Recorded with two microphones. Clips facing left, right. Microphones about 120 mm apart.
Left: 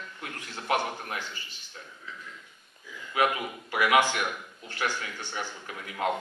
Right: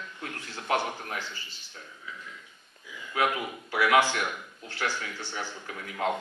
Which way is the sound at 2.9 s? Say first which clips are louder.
Even; 15° right (ahead or behind).